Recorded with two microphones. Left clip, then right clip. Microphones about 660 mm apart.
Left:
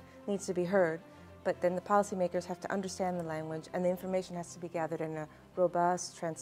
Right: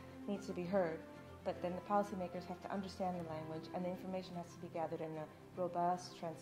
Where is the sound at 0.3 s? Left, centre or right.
Left.